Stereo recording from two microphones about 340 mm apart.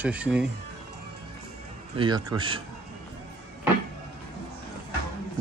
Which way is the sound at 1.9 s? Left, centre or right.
Centre.